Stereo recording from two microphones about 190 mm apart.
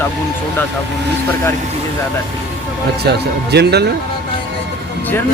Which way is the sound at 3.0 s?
60° right (ahead or behind).